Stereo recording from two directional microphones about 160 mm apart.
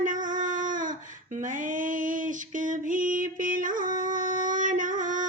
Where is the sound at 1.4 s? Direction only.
55° right (ahead or behind).